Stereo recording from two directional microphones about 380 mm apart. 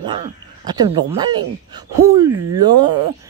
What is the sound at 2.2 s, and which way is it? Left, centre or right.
Speech, right.